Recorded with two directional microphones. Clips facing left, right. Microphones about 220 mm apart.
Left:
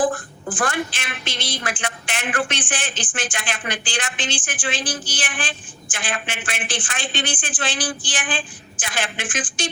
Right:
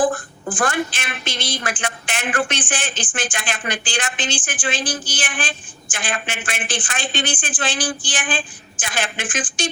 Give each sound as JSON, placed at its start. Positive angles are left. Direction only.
{"t": 0.5, "sound": "a woman's voice", "side_deg": -45}